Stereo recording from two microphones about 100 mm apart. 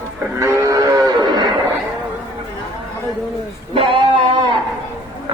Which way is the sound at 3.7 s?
60° right (ahead or behind).